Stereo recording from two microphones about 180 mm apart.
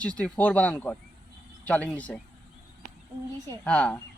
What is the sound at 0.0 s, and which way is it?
Speech, 5° left (ahead or behind).